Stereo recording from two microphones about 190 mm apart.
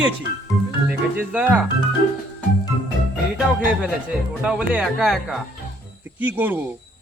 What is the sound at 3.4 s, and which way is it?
A man's voice, 5° right (ahead or behind).